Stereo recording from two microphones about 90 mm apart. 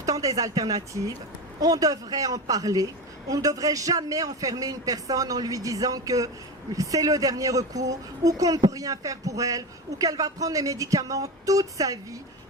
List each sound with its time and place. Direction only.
0.0 s a woman's voice: 40° right (ahead or behind)